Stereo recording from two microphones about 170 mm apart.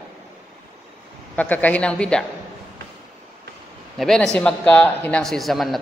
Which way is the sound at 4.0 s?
Centre (ahead or behind).